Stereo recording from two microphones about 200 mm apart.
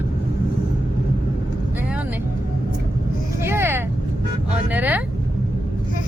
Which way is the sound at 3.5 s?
10° right (ahead or behind).